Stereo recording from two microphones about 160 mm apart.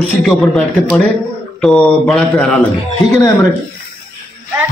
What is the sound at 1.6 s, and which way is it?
Speech, 5° left (ahead or behind).